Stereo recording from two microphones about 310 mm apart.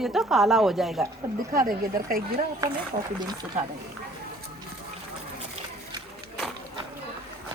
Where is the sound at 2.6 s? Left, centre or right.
Centre.